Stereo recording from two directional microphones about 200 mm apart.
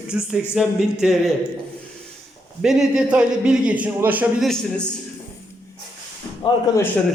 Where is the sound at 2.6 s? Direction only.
5° right (ahead or behind).